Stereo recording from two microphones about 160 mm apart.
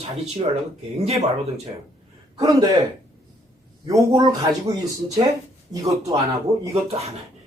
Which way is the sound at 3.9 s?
25° right (ahead or behind).